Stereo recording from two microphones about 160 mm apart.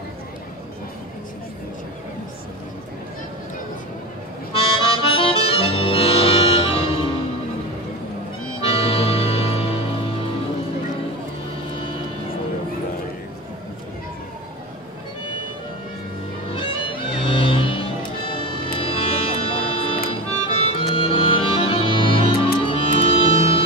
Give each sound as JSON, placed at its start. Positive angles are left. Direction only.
{"t": 4.6, "sound": "harmonica", "side_deg": 35}
{"t": 8.5, "sound": "music", "side_deg": 35}
{"t": 11.8, "sound": "vehicle", "side_deg": 35}
{"t": 16.5, "sound": "music", "side_deg": 35}